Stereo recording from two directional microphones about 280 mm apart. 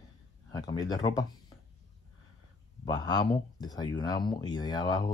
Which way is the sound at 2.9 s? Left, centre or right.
Centre.